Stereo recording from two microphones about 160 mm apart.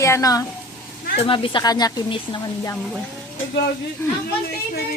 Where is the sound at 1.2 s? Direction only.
35° left (ahead or behind).